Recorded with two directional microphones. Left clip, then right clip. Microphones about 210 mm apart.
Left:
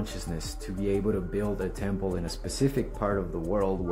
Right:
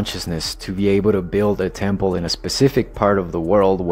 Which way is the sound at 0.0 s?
35° right (ahead or behind).